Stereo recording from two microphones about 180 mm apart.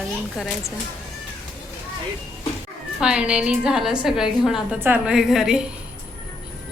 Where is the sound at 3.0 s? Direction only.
5° right (ahead or behind).